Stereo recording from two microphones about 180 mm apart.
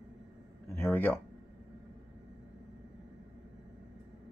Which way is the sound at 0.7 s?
10° left (ahead or behind).